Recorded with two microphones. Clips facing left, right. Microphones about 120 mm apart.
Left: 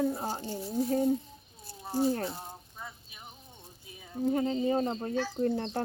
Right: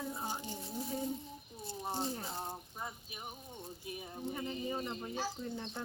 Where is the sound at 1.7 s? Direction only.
25° right (ahead or behind).